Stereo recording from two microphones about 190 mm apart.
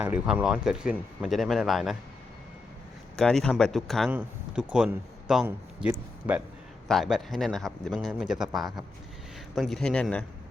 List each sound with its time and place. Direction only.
0.0 s speech: 10° right (ahead or behind)
3.2 s a man's voice: 5° left (ahead or behind)